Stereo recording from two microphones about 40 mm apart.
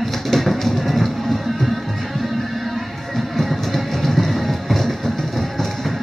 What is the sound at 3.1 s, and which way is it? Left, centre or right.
Music, centre.